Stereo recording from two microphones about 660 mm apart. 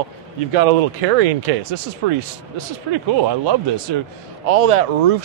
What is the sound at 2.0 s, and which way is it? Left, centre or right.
Speech, right.